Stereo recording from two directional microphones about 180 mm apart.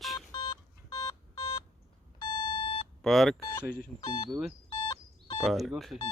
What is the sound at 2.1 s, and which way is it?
Alarm clock, 25° left (ahead or behind).